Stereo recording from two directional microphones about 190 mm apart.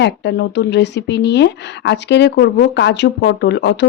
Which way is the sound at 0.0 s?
65° left (ahead or behind).